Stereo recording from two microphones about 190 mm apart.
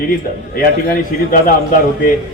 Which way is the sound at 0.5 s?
50° left (ahead or behind).